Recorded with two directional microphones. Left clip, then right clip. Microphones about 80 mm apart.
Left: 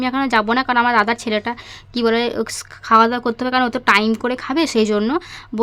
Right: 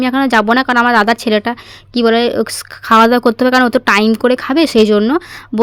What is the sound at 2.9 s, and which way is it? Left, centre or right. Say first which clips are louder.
Speech: right 5 dB; right.